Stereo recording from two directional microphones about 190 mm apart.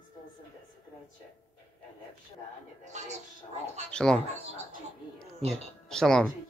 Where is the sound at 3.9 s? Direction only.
5° left (ahead or behind).